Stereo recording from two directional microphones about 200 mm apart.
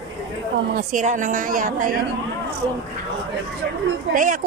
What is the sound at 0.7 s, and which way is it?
A woman's voice, 40° right (ahead or behind).